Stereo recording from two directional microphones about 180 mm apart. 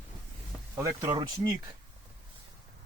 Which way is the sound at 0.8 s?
20° right (ahead or behind).